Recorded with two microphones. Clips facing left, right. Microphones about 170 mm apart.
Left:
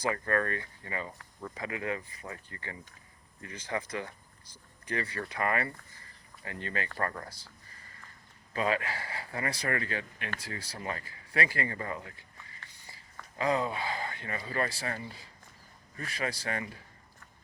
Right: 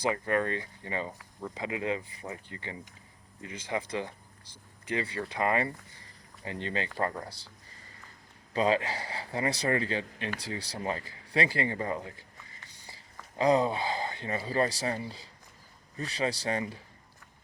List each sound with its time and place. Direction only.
0.0 s speech: 15° right (ahead or behind)
1.2 s speech: 15° right (ahead or behind)
8.5 s speech: 25° right (ahead or behind)
13.4 s speech: 30° right (ahead or behind)